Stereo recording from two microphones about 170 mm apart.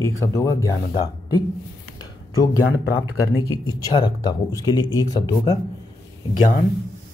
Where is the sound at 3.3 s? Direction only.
25° left (ahead or behind).